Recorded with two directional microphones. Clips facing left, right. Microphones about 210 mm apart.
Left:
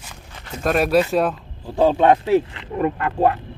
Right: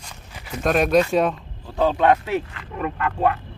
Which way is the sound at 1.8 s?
30° left (ahead or behind).